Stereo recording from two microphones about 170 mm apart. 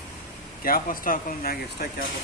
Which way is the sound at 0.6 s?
55° left (ahead or behind).